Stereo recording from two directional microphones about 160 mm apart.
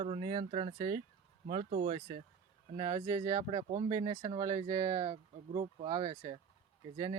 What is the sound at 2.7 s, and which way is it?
Speech, 25° right (ahead or behind).